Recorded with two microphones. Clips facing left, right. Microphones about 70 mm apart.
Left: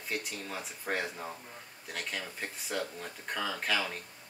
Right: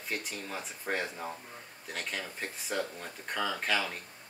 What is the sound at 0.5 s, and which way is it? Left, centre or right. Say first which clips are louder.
Speech: right 1 dB; centre.